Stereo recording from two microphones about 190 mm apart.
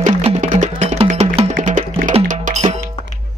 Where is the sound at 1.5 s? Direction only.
45° right (ahead or behind).